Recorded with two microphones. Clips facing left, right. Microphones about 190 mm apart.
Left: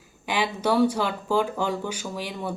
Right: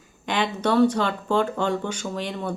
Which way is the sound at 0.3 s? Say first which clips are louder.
Right 1 dB; 10° left (ahead or behind).